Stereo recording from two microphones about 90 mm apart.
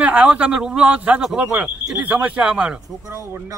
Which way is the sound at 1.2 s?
5° right (ahead or behind).